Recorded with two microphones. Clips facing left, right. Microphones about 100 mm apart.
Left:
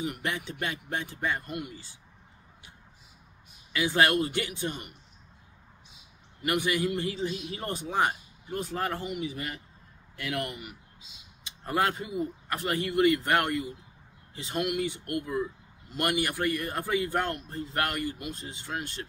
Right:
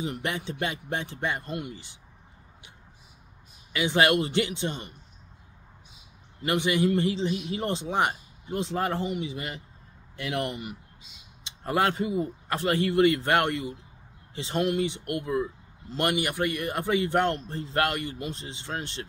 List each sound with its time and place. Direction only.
0.0 s speech: 25° right (ahead or behind)
3.7 s speech: 20° right (ahead or behind)
6.4 s speech: 25° right (ahead or behind)